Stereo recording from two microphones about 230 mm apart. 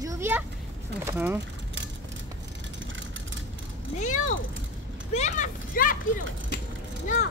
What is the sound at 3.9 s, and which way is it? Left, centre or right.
Vehicle, left.